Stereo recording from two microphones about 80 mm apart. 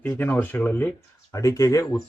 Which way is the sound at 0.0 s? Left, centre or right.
Left.